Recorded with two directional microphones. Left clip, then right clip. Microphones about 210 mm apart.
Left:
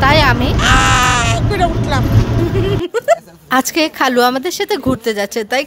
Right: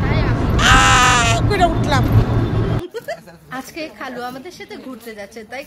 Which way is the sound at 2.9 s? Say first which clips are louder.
Left 14 dB; 50° left (ahead or behind).